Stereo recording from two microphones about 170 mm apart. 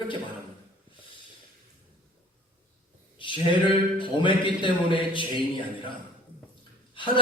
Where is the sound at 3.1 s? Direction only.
30° left (ahead or behind).